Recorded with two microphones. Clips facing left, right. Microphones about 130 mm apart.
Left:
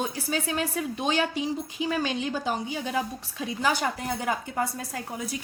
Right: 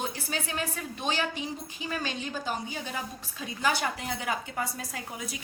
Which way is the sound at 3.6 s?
45° left (ahead or behind).